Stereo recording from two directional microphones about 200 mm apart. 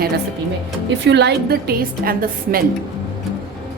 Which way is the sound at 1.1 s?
55° right (ahead or behind).